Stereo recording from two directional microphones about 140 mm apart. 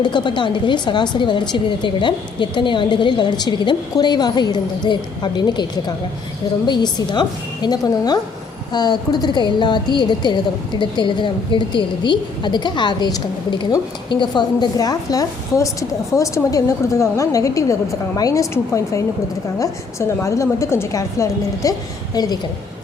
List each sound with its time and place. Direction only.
0.0 s a woman's voice: 35° left (ahead or behind)